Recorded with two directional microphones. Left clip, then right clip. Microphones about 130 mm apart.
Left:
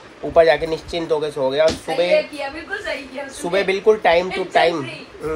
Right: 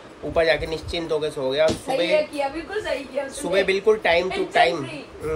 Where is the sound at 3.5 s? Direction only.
10° left (ahead or behind).